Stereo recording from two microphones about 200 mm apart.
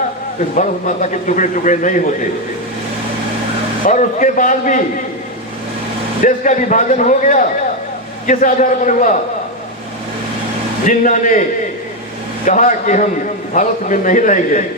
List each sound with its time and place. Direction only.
0.5 s a man's voice: 40° left (ahead or behind)
3.8 s a man's voice: 40° left (ahead or behind)
6.2 s a man's voice: 40° left (ahead or behind)
10.8 s a man's voice: 40° left (ahead or behind)
12.5 s a man's voice: 40° left (ahead or behind)